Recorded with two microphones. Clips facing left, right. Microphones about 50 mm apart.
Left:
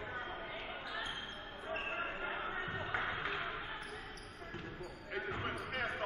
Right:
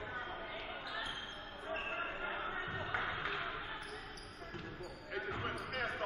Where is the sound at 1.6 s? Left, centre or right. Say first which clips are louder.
Left 1 dB; centre.